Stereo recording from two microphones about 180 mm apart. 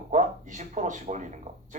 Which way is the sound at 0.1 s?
40° right (ahead or behind).